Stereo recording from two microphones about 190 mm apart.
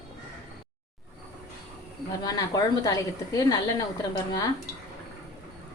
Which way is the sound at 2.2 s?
20° left (ahead or behind).